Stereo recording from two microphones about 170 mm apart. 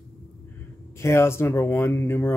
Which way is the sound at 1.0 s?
15° left (ahead or behind).